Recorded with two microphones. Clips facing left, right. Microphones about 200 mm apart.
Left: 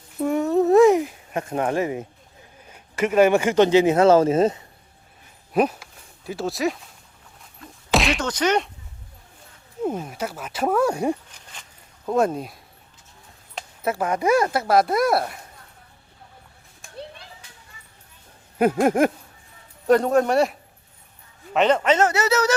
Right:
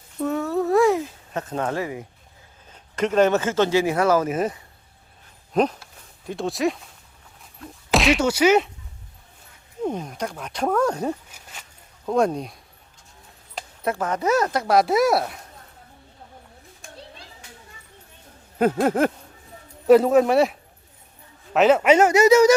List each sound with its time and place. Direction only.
0.2 s a sound: 15° left (ahead or behind)
2.6 s speech: 10° left (ahead or behind); by 4.6 s 25° left (ahead or behind)
5.5 s speech: 10° left (ahead or behind)
9.8 s speech: 5° left (ahead or behind)
11.3 s a sound: 5° right (ahead or behind)
12.0 s speech: centre (ahead or behind)
13.6 s speech: 5° left (ahead or behind)
18.6 s speech: 10° left (ahead or behind)
19.9 s a man's voice: 5° right (ahead or behind)